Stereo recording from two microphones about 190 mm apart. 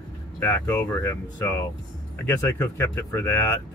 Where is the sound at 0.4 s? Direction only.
15° left (ahead or behind).